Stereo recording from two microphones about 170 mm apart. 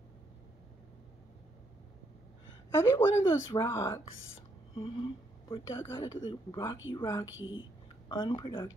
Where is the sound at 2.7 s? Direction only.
15° left (ahead or behind).